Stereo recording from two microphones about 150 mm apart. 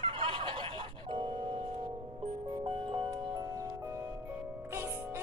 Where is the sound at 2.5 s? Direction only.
35° right (ahead or behind).